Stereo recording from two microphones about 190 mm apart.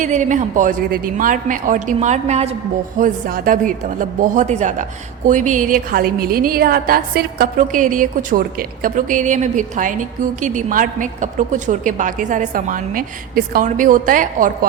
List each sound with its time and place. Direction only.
0.0 s a woman's voice: 40° right (ahead or behind)
3.0 s a woman's voice: 50° right (ahead or behind)